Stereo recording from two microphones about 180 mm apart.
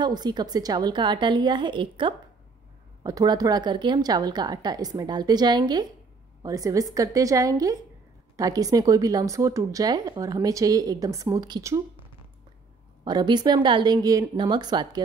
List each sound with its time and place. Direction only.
0.0 s speech: 25° right (ahead or behind)
13.0 s speech: 25° right (ahead or behind)